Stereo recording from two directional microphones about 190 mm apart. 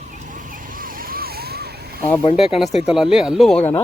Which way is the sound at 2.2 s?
30° left (ahead or behind).